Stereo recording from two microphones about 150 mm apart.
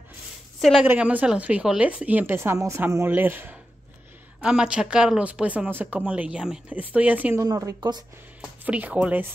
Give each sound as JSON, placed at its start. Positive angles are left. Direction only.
{"t": 0.6, "sound": "a woman's voice", "side_deg": 0}
{"t": 0.8, "sound": "speech", "side_deg": -10}
{"t": 7.4, "sound": "a woman's voice", "side_deg": -25}
{"t": 8.4, "sound": "speech", "side_deg": -10}